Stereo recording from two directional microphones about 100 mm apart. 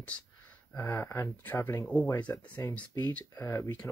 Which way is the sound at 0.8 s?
20° left (ahead or behind).